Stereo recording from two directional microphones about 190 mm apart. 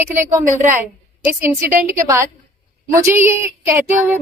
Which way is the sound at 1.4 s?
15° right (ahead or behind).